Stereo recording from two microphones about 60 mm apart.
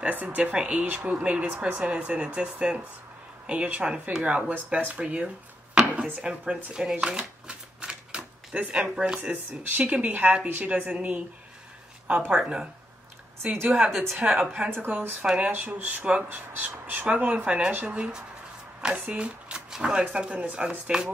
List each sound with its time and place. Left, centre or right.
0.1 s speech: right
6.2 s shuffling cards: centre
8.5 s speech: right
12.4 s a woman's voice: centre
13.4 s speech: right
13.7 s a woman's voice: centre
14.9 s speech: right
15.2 s a woman's voice: centre
15.5 s speech: right
16.3 s a woman's voice: right; by 21.1 s centre